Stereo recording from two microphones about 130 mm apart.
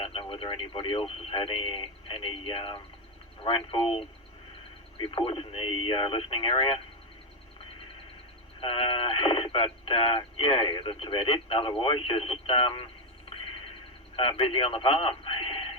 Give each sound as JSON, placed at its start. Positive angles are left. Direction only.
{"t": 0.0, "sound": "speech", "side_deg": 45}
{"t": 8.6, "sound": "speech", "side_deg": 45}
{"t": 14.2, "sound": "speech", "side_deg": 45}